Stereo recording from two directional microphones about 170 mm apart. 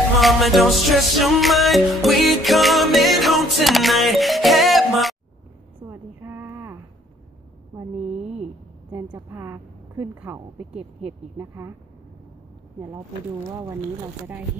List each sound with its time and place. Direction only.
0.2 s music: centre (ahead or behind)
5.9 s a sound: 10° right (ahead or behind)
7.7 s mantra: 15° right (ahead or behind)
9.1 s a woman's voice: 15° right (ahead or behind)
10.7 s speech: 40° right (ahead or behind)
11.3 s a woman's voice: 15° right (ahead or behind)